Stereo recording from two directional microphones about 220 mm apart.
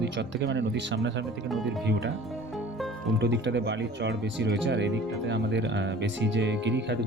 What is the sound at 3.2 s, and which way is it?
Speech, 50° right (ahead or behind).